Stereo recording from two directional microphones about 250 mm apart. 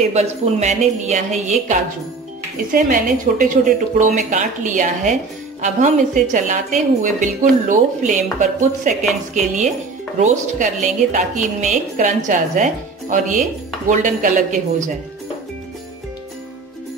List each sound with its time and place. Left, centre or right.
0.1 s a woman's voice: right